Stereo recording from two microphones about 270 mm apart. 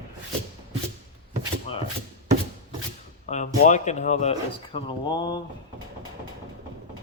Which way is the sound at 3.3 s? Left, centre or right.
Left.